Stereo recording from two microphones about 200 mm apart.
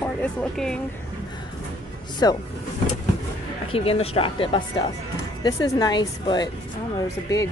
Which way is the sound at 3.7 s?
30° left (ahead or behind).